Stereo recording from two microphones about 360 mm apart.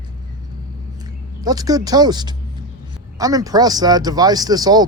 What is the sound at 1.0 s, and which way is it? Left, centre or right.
A man's voice, centre.